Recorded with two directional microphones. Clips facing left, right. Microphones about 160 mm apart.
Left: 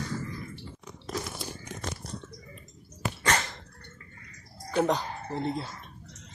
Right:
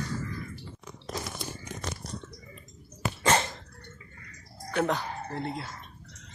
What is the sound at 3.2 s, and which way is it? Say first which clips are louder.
Dog: right 4 dB; 25° right (ahead or behind).